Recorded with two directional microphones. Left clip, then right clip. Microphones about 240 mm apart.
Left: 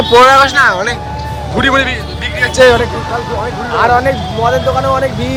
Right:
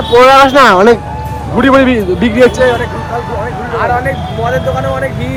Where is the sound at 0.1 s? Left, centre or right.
Centre.